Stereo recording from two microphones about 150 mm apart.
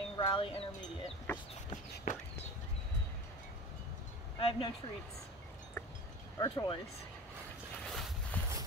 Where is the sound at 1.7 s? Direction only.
55° left (ahead or behind).